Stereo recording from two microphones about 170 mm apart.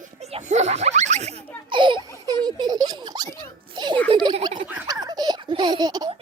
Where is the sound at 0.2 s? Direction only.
40° right (ahead or behind).